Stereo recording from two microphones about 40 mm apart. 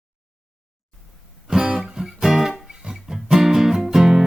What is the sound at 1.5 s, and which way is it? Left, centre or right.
Music, centre.